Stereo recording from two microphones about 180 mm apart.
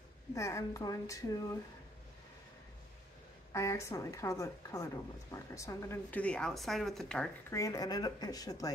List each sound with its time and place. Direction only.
0.3 s speech: 15° left (ahead or behind)
3.5 s speech: 15° left (ahead or behind)
7.5 s speech: 20° left (ahead or behind)